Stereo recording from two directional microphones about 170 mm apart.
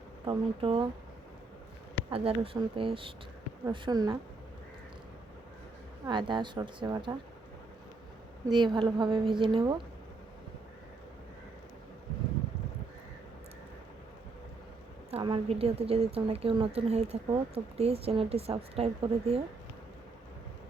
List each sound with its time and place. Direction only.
0.3 s a woman's voice: 30° right (ahead or behind)
2.0 s a woman's voice: 35° right (ahead or behind)
6.1 s a woman's voice: 30° right (ahead or behind)
8.4 s a woman's voice: 25° right (ahead or behind)
15.1 s a woman's voice: 30° right (ahead or behind)